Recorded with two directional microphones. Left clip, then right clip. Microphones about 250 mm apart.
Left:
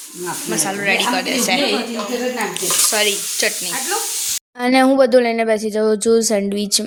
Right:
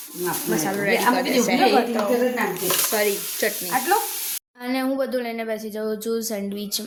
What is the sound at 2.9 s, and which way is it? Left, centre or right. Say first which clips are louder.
Speech: left 5 dB; centre.